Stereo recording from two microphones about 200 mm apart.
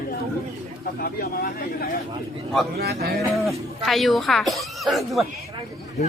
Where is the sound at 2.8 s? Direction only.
50° right (ahead or behind).